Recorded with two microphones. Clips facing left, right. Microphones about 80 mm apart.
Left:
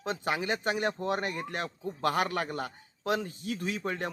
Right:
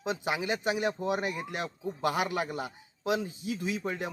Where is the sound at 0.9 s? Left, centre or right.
Centre.